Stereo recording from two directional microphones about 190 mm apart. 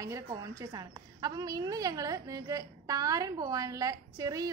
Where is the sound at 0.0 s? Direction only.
15° right (ahead or behind).